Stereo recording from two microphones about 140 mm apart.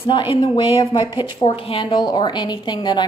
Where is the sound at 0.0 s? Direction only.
35° left (ahead or behind).